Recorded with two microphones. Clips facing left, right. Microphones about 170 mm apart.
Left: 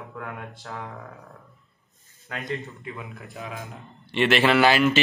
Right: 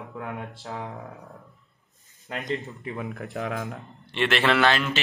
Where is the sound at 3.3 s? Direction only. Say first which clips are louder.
Right 6 dB; 65° right (ahead or behind).